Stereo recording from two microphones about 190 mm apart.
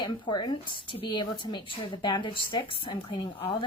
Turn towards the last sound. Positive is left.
turn(degrees=25)  # may be behind; listen again after turning